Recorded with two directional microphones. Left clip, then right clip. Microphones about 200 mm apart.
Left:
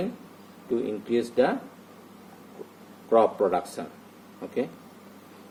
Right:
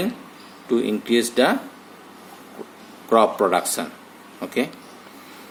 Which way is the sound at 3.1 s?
25° right (ahead or behind).